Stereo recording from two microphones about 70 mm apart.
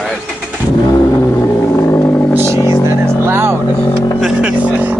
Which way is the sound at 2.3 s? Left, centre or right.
Right.